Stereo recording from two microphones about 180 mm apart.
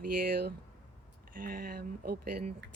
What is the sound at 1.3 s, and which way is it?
Speech, 50° right (ahead or behind).